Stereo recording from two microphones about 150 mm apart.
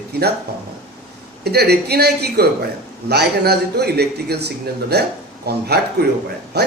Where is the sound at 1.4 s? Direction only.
90° right.